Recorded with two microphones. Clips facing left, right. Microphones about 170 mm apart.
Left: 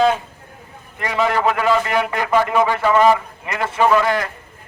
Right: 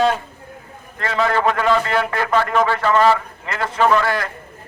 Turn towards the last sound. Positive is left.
turn(degrees=15)  # may be behind; listen again after turning